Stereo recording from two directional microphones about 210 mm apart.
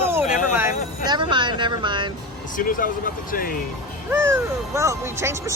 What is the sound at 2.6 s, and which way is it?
Speech, 40° left (ahead or behind).